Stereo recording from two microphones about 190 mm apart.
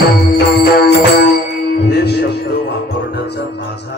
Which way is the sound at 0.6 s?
55° left (ahead or behind).